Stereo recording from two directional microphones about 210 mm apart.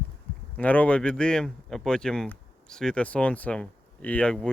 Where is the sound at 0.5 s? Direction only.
5° left (ahead or behind).